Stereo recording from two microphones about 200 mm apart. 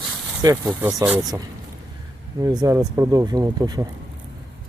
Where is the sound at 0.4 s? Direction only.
15° right (ahead or behind).